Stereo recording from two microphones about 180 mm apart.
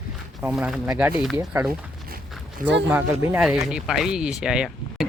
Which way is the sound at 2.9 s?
15° right (ahead or behind).